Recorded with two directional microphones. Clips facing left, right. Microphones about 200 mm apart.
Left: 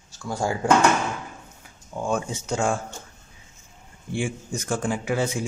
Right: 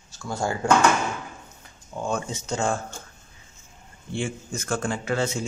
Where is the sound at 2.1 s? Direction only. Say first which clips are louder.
Left 2 dB; 10° left (ahead or behind).